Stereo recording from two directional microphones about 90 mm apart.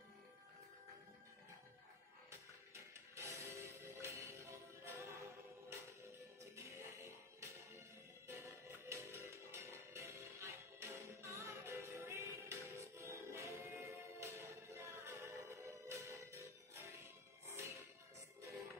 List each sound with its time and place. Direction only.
2.7 s music: 30° right (ahead or behind)
6.5 s music: 30° right (ahead or behind)